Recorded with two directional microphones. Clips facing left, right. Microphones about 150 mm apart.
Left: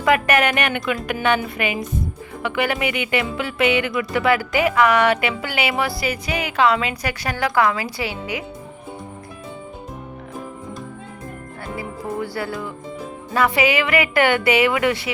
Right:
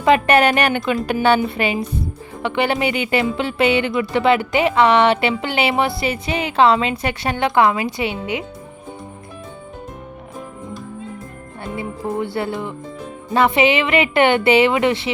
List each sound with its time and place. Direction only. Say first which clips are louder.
0.0 s a woman's voice: right 4 dB; 30° right (ahead or behind)
11.6 s music: right 4 dB; 25° right (ahead or behind)
13.3 s speech: right 3 dB; 25° right (ahead or behind)